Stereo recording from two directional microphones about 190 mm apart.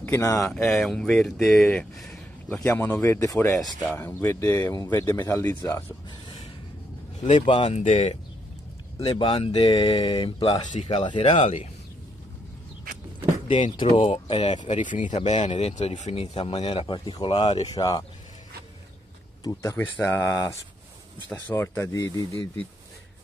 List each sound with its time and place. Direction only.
0.0 s speech: 15° left (ahead or behind)
7.4 s speech: 30° left (ahead or behind)
13.5 s speech: 25° left (ahead or behind)
19.4 s speech: 15° left (ahead or behind)
22.3 s speech: 30° right (ahead or behind)